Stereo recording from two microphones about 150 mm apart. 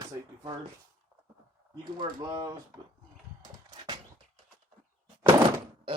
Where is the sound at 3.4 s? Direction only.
30° right (ahead or behind).